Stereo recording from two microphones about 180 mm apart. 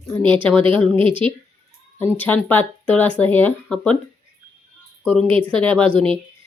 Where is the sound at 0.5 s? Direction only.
30° right (ahead or behind).